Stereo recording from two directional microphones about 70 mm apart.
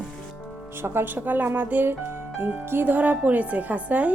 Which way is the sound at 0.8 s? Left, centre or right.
Right.